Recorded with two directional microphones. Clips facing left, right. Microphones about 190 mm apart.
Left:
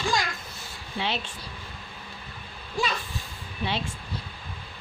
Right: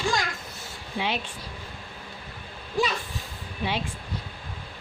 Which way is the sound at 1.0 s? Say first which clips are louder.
Right 1 dB; 10° right (ahead or behind).